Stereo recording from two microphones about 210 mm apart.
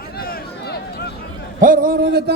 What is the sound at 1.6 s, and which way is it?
Speech, 40° right (ahead or behind).